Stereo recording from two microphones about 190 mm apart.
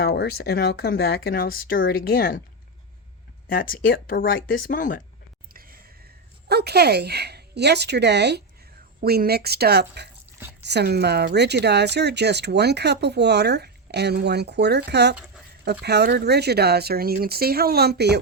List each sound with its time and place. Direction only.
0.0 s speech: 60° left (ahead or behind)
3.5 s speech: 50° left (ahead or behind)
6.5 s speech: 60° right (ahead or behind)